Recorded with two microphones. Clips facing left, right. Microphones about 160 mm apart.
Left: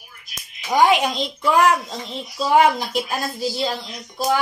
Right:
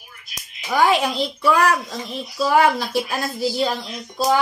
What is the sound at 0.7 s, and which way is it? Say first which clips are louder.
A child's voice: left 1 dB; 20° left (ahead or behind).